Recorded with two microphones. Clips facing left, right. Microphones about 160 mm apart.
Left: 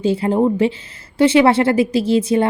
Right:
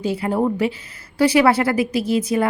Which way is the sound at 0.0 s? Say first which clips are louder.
Left 4 dB; 25° left (ahead or behind).